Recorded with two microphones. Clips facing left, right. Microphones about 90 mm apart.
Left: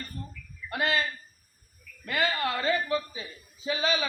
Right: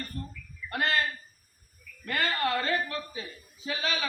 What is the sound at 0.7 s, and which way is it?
Speech, 15° left (ahead or behind).